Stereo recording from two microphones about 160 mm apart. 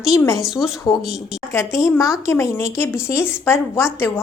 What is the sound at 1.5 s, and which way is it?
Speech, 20° left (ahead or behind).